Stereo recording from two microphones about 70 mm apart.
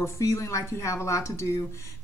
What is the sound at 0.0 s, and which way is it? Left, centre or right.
Speech, left.